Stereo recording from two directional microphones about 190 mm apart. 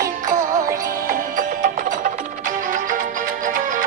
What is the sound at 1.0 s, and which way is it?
Music, 45° right (ahead or behind).